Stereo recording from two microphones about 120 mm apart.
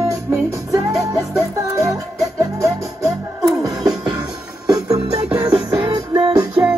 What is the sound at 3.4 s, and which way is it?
Music, 30° right (ahead or behind).